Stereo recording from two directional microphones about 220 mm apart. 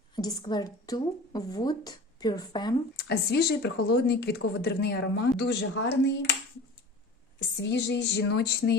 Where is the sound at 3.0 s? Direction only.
50° left (ahead or behind).